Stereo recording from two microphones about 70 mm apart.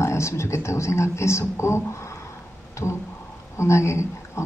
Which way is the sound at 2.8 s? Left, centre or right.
Left.